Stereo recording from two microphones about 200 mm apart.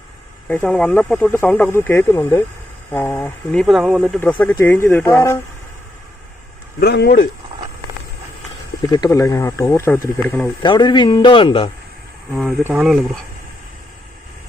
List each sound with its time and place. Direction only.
0.4 s speech: 5° left (ahead or behind)
4.2 s speech: 5° left (ahead or behind)
6.7 s speech: 55° left (ahead or behind)
9.0 s speech: 15° left (ahead or behind)
10.6 s a man's voice: 20° left (ahead or behind)
12.3 s speech: centre (ahead or behind)